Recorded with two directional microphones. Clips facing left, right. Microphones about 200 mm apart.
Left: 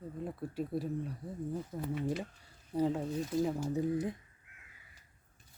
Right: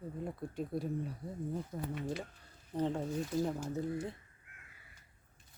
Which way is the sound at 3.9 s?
15° left (ahead or behind).